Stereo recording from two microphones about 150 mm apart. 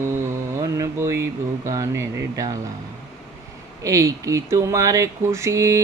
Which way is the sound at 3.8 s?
20° right (ahead or behind).